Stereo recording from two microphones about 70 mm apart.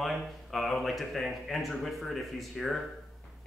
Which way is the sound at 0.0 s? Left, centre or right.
Centre.